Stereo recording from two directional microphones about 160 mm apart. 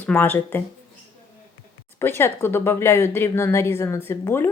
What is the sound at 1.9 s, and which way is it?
Speech, 15° left (ahead or behind).